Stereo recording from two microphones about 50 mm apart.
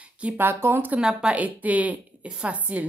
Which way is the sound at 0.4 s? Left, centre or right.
Right.